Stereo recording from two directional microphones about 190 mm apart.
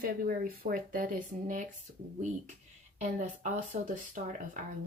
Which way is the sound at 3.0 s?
40° right (ahead or behind).